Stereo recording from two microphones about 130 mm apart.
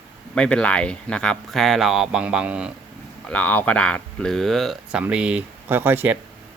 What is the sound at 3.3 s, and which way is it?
Speech, 10° left (ahead or behind).